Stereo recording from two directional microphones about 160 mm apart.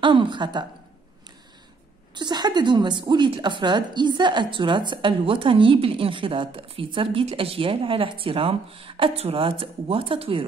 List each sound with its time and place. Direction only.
0.0 s a woman's voice: 30° right (ahead or behind)
2.1 s a woman's voice: 25° right (ahead or behind)